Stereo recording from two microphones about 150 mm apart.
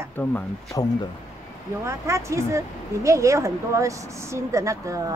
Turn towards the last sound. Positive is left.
turn(degrees=-20)  # may be behind; listen again after turning